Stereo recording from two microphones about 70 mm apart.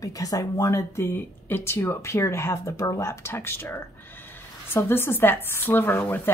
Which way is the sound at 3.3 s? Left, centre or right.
Left.